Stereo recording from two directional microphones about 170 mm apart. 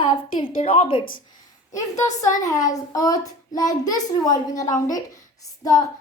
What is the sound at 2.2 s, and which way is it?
A woman's voice, 20° left (ahead or behind).